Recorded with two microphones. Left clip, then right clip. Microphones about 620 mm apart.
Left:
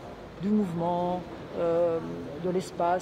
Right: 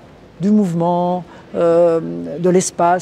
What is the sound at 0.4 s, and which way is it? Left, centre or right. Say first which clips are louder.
Speech: right 12 dB; right.